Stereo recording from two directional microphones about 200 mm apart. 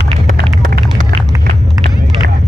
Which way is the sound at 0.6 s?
40° right (ahead or behind).